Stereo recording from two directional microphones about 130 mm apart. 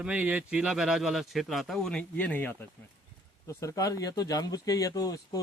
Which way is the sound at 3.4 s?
25° left (ahead or behind).